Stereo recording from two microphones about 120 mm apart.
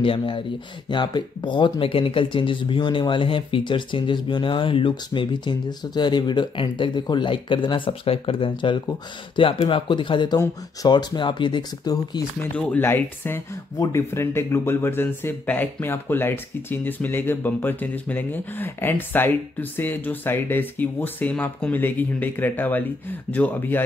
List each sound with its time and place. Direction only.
0.0 s speech: 45° left (ahead or behind)
12.5 s speech: 15° left (ahead or behind)